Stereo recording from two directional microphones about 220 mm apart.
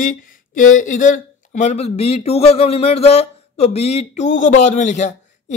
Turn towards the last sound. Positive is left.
turn(degrees=30)  # may be behind; listen again after turning